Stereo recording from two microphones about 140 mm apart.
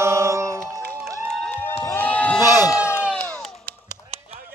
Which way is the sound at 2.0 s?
10° left (ahead or behind).